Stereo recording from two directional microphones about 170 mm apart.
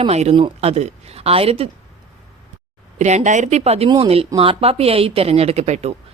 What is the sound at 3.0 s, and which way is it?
Speech, 45° right (ahead or behind).